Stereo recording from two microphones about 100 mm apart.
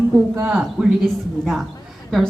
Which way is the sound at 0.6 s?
Centre (ahead or behind).